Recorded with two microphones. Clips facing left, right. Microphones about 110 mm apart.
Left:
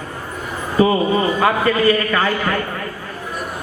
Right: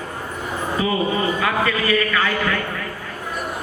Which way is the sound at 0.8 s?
35° left (ahead or behind).